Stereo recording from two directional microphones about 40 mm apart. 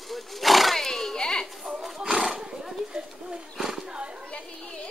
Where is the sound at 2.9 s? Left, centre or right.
Centre.